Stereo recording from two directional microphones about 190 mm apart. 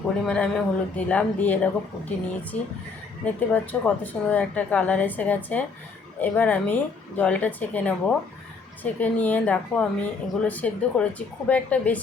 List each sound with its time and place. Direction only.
0.3 s speech: 5° left (ahead or behind)